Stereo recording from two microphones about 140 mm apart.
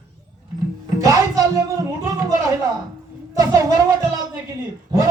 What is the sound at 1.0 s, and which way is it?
Speech, 25° right (ahead or behind).